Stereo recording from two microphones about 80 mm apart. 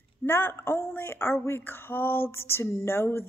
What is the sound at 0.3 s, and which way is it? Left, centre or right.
Female singing, left.